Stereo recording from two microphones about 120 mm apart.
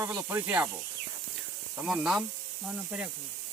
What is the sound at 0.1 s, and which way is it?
Speech, 15° right (ahead or behind).